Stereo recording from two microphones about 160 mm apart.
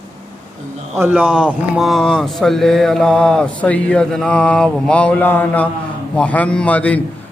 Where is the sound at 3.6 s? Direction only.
10° left (ahead or behind).